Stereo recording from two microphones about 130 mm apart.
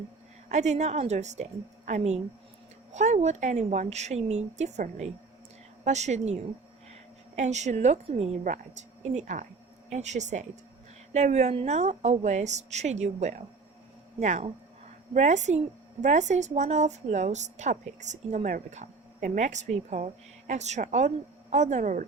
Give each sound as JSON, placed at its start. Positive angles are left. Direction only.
{"t": 0.4, "sound": "a woman's voice", "side_deg": -65}